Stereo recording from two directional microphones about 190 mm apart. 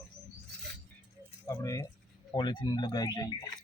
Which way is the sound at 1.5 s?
15° left (ahead or behind).